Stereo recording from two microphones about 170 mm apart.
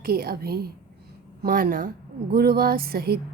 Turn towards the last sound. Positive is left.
turn(degrees=-65)  # may be behind; listen again after turning